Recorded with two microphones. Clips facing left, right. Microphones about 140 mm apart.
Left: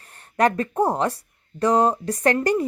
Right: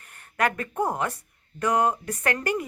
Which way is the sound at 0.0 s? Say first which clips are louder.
Left 6 dB; 35° left (ahead or behind).